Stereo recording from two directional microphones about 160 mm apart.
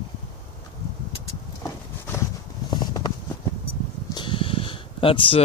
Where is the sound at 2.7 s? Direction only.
25° left (ahead or behind).